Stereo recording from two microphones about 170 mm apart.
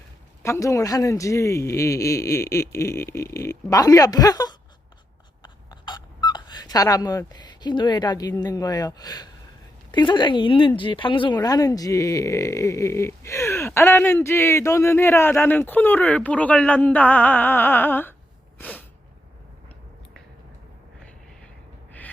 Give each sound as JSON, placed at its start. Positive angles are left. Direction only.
{"t": 0.4, "sound": "speech", "side_deg": 20}
{"t": 5.4, "sound": "a sound", "side_deg": 25}
{"t": 9.9, "sound": "speech", "side_deg": 25}